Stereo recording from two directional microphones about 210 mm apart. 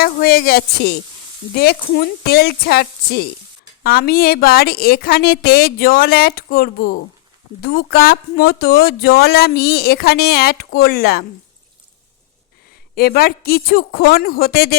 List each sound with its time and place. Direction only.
0.0 s speech: 45° left (ahead or behind)
13.0 s speech: 45° left (ahead or behind)